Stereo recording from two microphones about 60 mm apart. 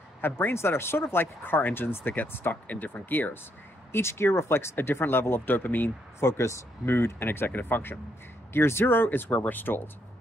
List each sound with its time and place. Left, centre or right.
0.2 s speech: left
3.9 s speech: left
6.1 s speech: left
6.9 s speech: left